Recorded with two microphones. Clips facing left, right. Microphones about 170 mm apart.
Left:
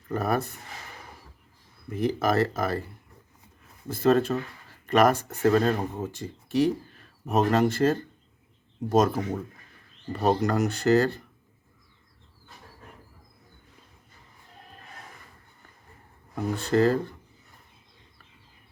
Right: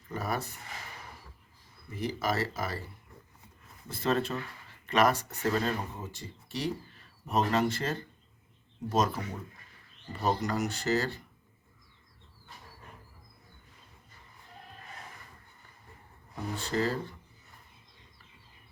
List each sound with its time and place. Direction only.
0.1 s speech: 55° left (ahead or behind)
2.0 s speech: 55° left (ahead or behind)
3.8 s speech: 45° left (ahead or behind)
10.1 s speech: 65° left (ahead or behind)
16.3 s speech: 55° left (ahead or behind)